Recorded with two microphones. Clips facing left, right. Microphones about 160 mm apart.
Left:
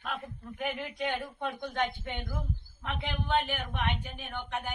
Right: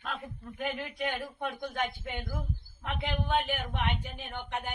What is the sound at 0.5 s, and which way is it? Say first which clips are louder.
Speech: even; centre (ahead or behind).